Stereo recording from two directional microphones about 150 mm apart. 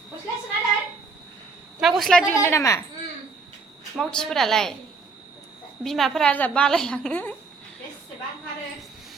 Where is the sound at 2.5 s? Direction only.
20° left (ahead or behind).